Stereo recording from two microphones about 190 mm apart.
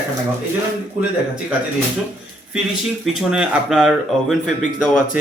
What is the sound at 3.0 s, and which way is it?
Speech, centre (ahead or behind).